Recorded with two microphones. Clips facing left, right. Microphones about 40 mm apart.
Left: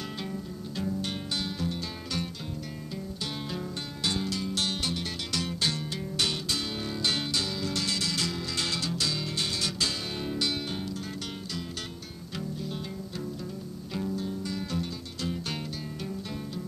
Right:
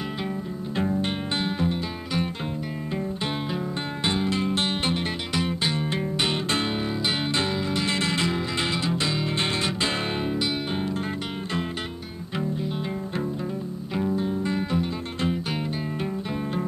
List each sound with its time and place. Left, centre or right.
0.7 s music: right
4.0 s music: right
7.3 s music: right
13.9 s music: right